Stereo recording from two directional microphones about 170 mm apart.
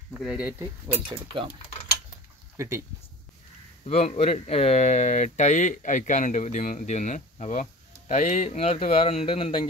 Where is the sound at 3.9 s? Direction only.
40° left (ahead or behind).